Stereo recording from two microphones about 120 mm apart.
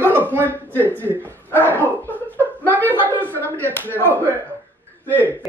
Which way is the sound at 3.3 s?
15° left (ahead or behind).